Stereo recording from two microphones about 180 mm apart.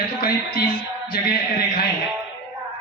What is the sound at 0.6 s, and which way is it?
Music, 25° left (ahead or behind).